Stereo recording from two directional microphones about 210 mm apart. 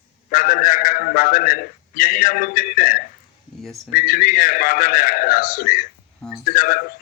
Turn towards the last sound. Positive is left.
turn(degrees=45)  # may be behind; listen again after turning